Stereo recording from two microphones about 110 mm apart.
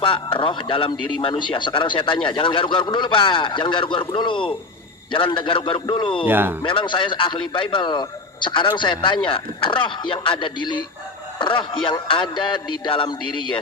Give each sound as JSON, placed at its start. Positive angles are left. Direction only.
{"t": 0.0, "sound": "a man's voice", "side_deg": 50}
{"t": 6.2, "sound": "speech", "side_deg": -20}
{"t": 6.6, "sound": "a man's voice", "side_deg": 50}